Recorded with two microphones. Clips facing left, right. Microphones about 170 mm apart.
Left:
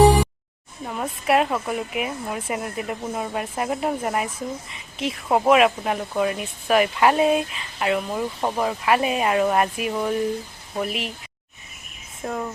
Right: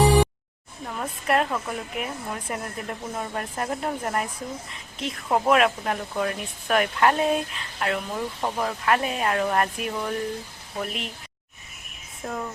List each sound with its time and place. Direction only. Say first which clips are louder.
0.9 s a woman's voice: left 4 dB; 5° left (ahead or behind)
12.2 s speech: left 3 dB; 5° left (ahead or behind)